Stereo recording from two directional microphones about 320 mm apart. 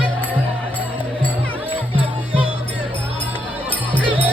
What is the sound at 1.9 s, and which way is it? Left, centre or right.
Music, centre.